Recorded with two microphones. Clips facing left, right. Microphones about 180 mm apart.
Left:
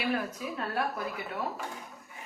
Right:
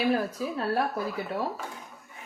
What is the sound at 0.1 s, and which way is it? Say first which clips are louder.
A woman's voice: right 5 dB; 35° right (ahead or behind).